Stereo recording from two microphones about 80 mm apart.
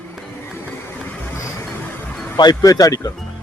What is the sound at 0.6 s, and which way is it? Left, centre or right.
Vehicle, left.